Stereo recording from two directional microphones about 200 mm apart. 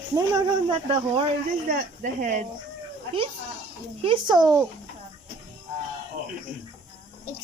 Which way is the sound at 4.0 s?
25° right (ahead or behind).